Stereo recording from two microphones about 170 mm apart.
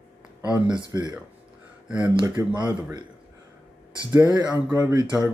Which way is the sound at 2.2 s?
10° right (ahead or behind).